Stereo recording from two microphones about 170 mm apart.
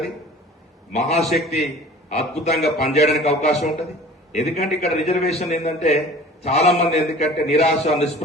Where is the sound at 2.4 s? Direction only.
40° left (ahead or behind).